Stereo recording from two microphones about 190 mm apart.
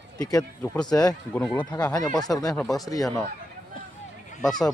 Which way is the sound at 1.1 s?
5° left (ahead or behind).